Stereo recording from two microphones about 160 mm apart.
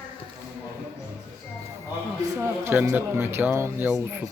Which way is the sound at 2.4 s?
15° right (ahead or behind).